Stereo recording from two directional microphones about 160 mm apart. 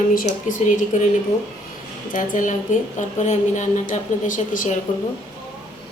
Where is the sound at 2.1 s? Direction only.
55° left (ahead or behind).